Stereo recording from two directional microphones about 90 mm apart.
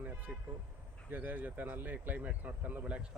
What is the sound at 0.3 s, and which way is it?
Speech, 20° right (ahead or behind).